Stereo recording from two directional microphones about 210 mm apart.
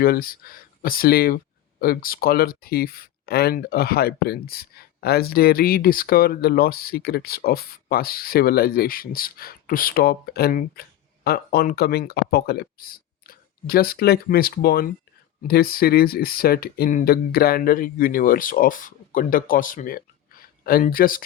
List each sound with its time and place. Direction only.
0.0 s speech: 45° left (ahead or behind)